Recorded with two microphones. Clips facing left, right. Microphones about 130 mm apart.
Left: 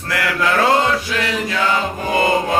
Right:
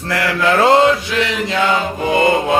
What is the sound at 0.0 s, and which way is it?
Mantra, 30° right (ahead or behind).